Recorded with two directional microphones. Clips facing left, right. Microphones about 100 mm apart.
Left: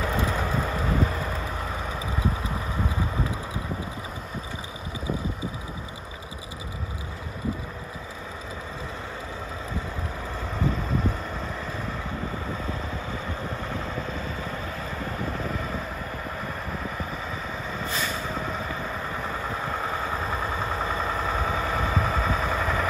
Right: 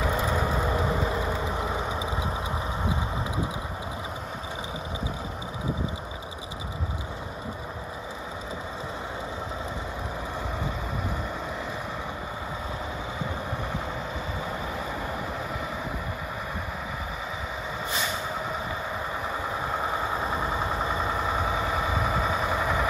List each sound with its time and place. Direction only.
0.0 s vehicle: 5° right (ahead or behind)
17.9 s vehicle: 15° right (ahead or behind)